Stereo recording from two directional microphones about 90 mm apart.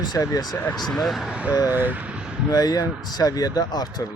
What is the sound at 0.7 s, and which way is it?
Speech, 5° left (ahead or behind).